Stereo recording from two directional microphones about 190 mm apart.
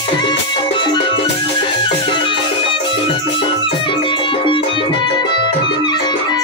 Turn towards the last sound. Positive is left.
turn(degrees=20)  # may be behind; listen again after turning